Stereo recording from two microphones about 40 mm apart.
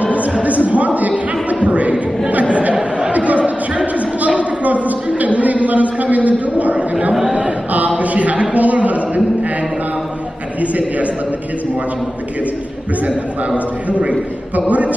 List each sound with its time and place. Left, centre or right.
0.0 s music: right
0.4 s a man's voice: right
2.3 s chatter: right
4.3 s a sound: right
6.8 s speech: right
7.3 s chant: right
8.0 s a sound: right
10.6 s a man's voice: right
13.8 s speech: right